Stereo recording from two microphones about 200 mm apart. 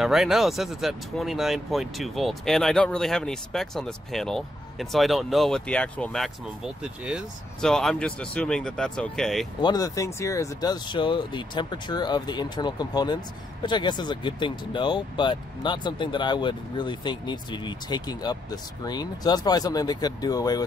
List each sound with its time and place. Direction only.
0.0 s speech: centre (ahead or behind)
9.6 s speech: 20° left (ahead or behind)